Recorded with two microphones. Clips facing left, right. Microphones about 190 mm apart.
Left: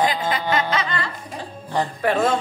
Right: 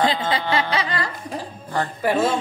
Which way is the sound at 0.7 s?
35° right (ahead or behind).